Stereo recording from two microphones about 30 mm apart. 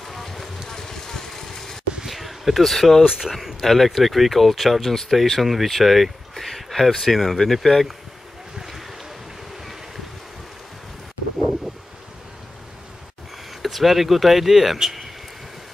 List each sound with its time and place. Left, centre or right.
0.0 s vehicle: centre
0.7 s vehicle: centre
2.0 s a sound: centre
2.7 s speech: centre
3.2 s speech: centre
3.6 s speech: centre
5.7 s a sound: centre
7.4 s speech: centre
8.5 s boat: centre
11.3 s vehicle: centre
13.6 s speech: centre